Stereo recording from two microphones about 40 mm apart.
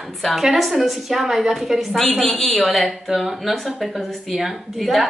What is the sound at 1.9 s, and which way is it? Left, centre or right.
A woman's voice, centre.